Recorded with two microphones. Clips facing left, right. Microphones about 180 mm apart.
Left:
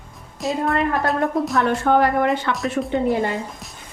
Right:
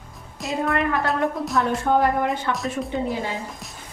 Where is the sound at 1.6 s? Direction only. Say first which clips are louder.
Left 2 dB; 75° left (ahead or behind).